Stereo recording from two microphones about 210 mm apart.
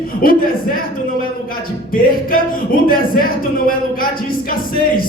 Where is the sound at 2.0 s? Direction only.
45° left (ahead or behind).